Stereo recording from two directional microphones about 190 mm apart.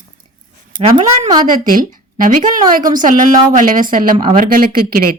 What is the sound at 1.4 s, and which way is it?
Speech, 45° right (ahead or behind).